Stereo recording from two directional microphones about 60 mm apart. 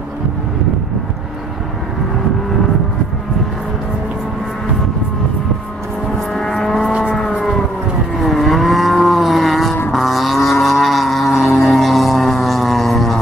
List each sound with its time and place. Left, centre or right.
6.3 s vehicle: centre
6.9 s siren: centre
8.2 s vehicle: centre
11.6 s music: centre